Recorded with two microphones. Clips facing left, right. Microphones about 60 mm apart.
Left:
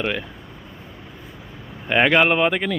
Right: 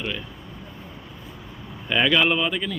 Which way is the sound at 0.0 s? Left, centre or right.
Left.